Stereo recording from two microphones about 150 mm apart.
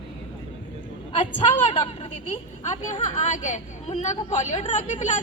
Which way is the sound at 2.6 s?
55° left (ahead or behind).